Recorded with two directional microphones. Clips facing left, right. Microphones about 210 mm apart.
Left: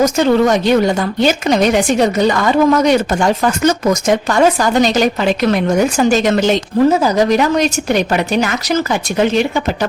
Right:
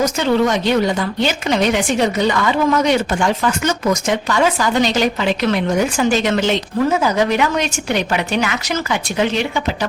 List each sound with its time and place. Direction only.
0.0 s a woman's voice: 45° left (ahead or behind)